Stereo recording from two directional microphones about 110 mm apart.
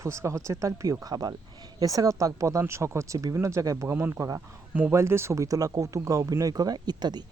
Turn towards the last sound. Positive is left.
turn(degrees=-40)  # may be behind; listen again after turning